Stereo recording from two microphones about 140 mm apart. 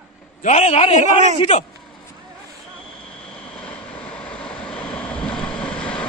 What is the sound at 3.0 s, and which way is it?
Vehicle, 10° left (ahead or behind).